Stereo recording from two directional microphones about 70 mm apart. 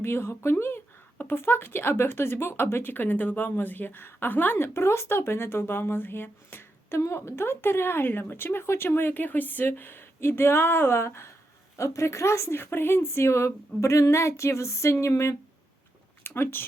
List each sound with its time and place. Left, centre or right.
0.0 s speech: left
16.2 s speech: left